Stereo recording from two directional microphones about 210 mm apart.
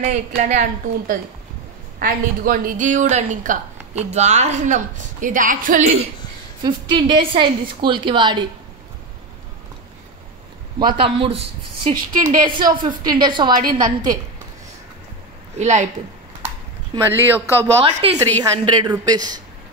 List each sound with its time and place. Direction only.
0.0 s speech: 35° right (ahead or behind)
6.6 s a woman's voice: 20° right (ahead or behind)
11.0 s a woman's voice: 25° right (ahead or behind)
12.4 s a woman's voice: 20° right (ahead or behind)
15.5 s speech: 35° right (ahead or behind)
16.9 s speech: 10° right (ahead or behind)
17.8 s a woman's voice: 25° right (ahead or behind)